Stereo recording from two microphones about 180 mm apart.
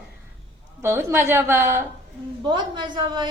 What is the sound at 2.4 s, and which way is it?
Speech, 25° right (ahead or behind).